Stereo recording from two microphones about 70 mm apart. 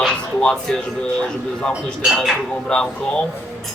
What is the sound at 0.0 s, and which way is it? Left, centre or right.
Music, centre.